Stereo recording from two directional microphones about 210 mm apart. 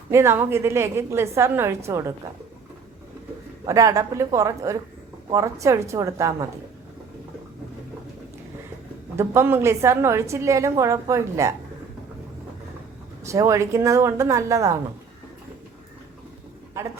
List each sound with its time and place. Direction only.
0.1 s a woman's voice: 10° right (ahead or behind)
3.7 s a woman's voice: 15° right (ahead or behind)
9.1 s a woman's voice: 10° right (ahead or behind)
13.2 s a woman's voice: 15° right (ahead or behind)